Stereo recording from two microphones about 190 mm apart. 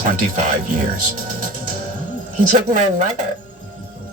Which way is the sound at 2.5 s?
40° right (ahead or behind).